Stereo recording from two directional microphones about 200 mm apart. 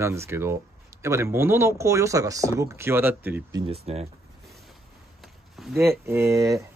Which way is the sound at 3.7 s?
30° right (ahead or behind).